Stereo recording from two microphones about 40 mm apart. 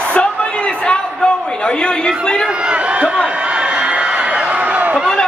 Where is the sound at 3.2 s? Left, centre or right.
Right.